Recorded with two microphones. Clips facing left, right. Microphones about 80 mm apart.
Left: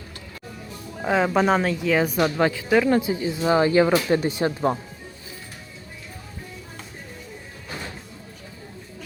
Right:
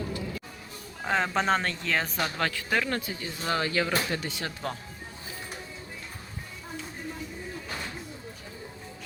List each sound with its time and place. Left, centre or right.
1.0 s speech: centre
2.1 s speech: centre